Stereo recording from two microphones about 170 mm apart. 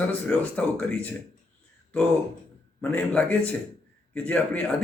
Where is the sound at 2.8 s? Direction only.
10° left (ahead or behind).